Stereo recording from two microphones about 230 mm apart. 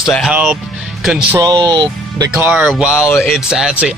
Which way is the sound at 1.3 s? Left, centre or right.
Centre.